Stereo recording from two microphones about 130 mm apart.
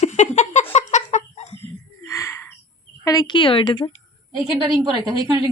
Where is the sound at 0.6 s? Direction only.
60° left (ahead or behind).